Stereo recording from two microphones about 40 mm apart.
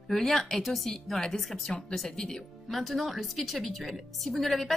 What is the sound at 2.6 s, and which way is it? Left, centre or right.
A woman's voice, centre.